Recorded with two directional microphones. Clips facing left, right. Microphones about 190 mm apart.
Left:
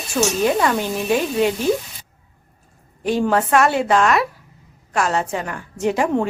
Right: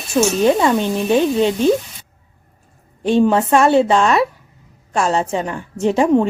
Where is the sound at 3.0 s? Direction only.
25° right (ahead or behind).